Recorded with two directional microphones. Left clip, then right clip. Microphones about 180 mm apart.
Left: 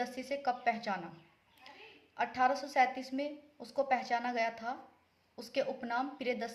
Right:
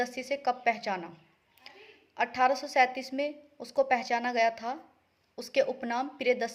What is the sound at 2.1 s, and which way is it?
A woman's voice, 40° right (ahead or behind).